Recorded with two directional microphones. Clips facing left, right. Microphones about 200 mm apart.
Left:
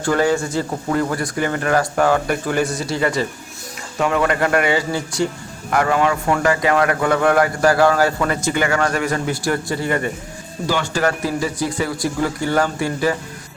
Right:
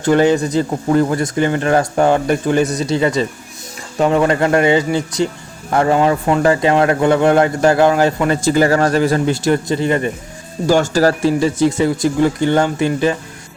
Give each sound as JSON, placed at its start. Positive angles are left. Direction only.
{"t": 0.0, "sound": "speech", "side_deg": -20}
{"t": 10.7, "sound": "speech", "side_deg": -40}